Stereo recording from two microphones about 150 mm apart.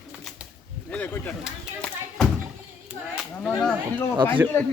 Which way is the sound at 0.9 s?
10° left (ahead or behind).